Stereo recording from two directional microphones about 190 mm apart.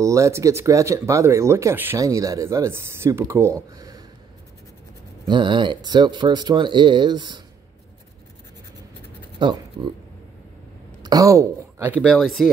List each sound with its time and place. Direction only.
0.0 s speech: 15° right (ahead or behind)
3.7 s a sound: 20° right (ahead or behind)
5.3 s speech: 25° right (ahead or behind)
9.4 s speech: 25° right (ahead or behind)
11.0 s speech: 20° right (ahead or behind); by 12.4 s centre (ahead or behind)